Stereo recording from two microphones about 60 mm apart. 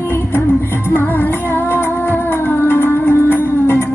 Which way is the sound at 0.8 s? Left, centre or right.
Left.